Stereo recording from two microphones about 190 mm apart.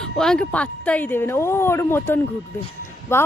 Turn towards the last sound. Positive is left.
turn(degrees=15)  # may be behind; listen again after turning